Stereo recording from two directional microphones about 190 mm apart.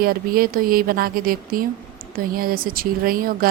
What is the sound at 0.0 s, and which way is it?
A woman's voice, 50° right (ahead or behind).